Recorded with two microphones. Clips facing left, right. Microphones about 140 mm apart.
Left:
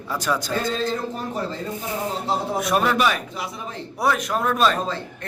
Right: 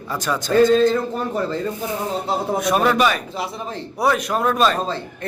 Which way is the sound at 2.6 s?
Centre (ahead or behind).